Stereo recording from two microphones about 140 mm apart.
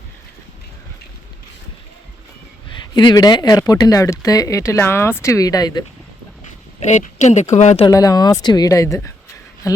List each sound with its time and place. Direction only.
2.6 s speech: 35° left (ahead or behind)
6.7 s speech: 55° left (ahead or behind)
7.9 s a woman's voice: 25° left (ahead or behind)